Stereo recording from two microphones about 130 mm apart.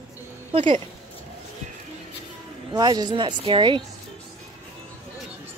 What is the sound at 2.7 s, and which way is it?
Speech, 30° right (ahead or behind).